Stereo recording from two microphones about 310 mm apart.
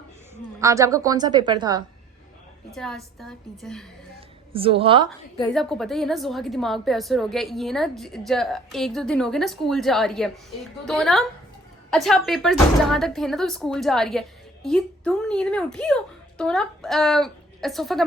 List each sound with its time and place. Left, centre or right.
0.6 s a woman's voice: centre
2.7 s a woman's voice: centre
4.5 s a woman's voice: centre
5.5 s a woman's voice: centre